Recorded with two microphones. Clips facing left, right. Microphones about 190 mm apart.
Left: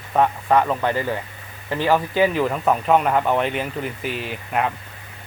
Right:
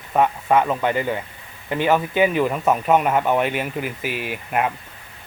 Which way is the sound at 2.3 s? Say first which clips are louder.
Right 1 dB; 5° right (ahead or behind).